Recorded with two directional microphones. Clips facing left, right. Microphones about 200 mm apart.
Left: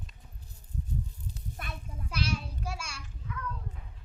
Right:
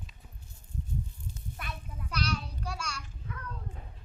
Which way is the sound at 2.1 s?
25° left (ahead or behind).